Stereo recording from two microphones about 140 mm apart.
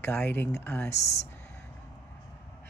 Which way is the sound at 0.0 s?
15° left (ahead or behind).